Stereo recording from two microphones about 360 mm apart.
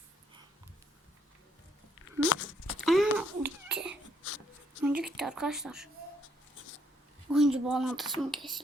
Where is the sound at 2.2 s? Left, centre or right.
Left.